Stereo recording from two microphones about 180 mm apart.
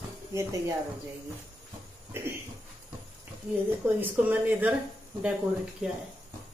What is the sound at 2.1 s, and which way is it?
Speech, 10° right (ahead or behind).